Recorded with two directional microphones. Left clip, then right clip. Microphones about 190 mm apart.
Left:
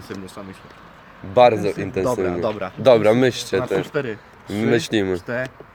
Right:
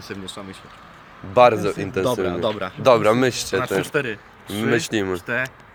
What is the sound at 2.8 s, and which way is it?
Speech, 25° left (ahead or behind).